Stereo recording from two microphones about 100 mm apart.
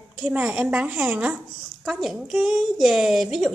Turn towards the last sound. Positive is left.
turn(degrees=0)  # may be behind; listen again after turning